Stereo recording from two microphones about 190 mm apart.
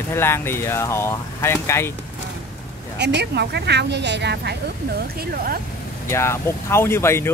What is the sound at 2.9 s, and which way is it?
Speech, 60° right (ahead or behind).